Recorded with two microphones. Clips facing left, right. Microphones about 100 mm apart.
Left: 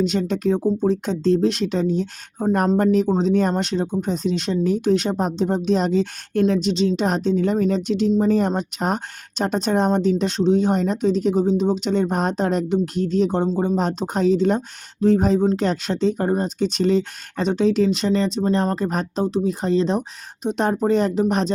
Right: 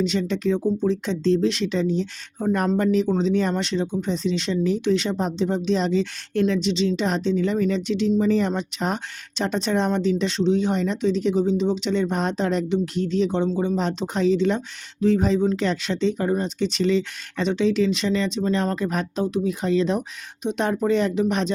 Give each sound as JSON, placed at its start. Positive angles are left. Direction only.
{"t": 0.0, "sound": "speech", "side_deg": 45}